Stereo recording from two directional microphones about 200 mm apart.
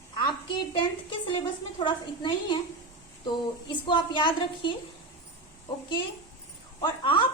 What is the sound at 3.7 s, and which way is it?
A woman's voice, 25° left (ahead or behind).